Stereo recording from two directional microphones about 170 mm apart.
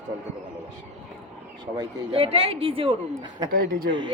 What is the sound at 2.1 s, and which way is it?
A woman's voice, 35° right (ahead or behind).